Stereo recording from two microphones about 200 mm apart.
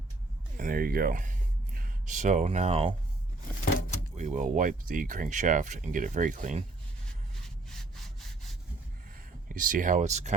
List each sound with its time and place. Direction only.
0.5 s a sound: 45° right (ahead or behind)
3.8 s door: 40° left (ahead or behind)
4.2 s speech: 35° right (ahead or behind)
7.4 s sawing: centre (ahead or behind)
9.5 s speech: 45° right (ahead or behind)